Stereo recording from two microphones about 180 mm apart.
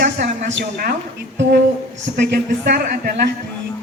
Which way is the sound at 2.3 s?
60° right (ahead or behind).